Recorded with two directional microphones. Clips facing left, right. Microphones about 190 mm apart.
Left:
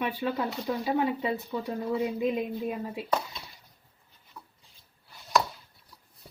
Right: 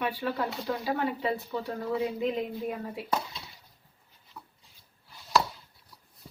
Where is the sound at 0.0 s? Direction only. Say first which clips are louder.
Left 1 dB; 20° left (ahead or behind).